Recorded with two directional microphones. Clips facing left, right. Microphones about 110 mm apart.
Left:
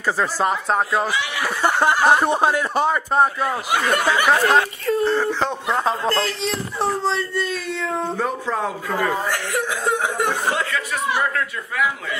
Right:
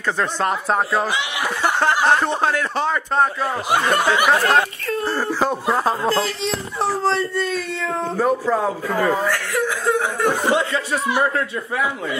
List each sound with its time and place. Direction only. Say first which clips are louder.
0.0 s speech: left 1 dB; 5° left (ahead or behind)
1.1 s speech: even; 20° right (ahead or behind)
2.0 s a man's voice: left 1 dB; 10° left (ahead or behind)
3.7 s snicker: right 2 dB; 35° right (ahead or behind)
4.0 s speech: right 1 dB; 15° right (ahead or behind)
4.3 s speech: even; centre (ahead or behind)
9.3 s speech: right 2 dB; 20° left (ahead or behind)
10.5 s a man's voice: right 4 dB; 25° right (ahead or behind)